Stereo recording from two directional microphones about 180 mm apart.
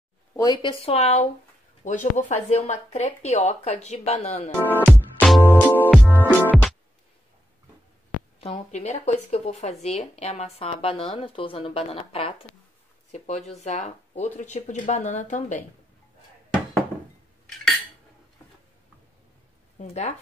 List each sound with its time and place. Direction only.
0.4 s speech: 25° left (ahead or behind)
0.8 s speech: 35° left (ahead or behind)
4.6 s music: 10° left (ahead or behind)
8.4 s speech: 35° left (ahead or behind)
19.8 s speech: 40° left (ahead or behind)